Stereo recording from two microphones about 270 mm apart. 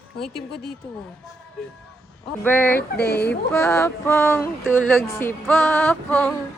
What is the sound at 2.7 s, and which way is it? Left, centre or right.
Speech, left.